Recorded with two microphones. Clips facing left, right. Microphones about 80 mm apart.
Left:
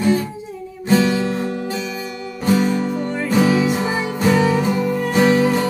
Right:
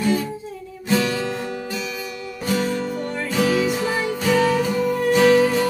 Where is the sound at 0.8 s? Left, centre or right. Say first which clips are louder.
Left 5 dB; left.